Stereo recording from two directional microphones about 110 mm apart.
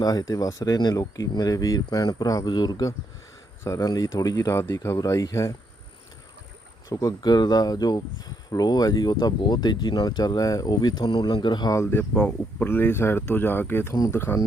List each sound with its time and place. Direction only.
0.0 s speech: 35° left (ahead or behind)
4.5 s speech: 25° left (ahead or behind)
6.9 s speech: 35° left (ahead or behind)
11.7 s speech: 25° left (ahead or behind)
12.1 s speech: 10° left (ahead or behind)
12.6 s speech: 20° left (ahead or behind)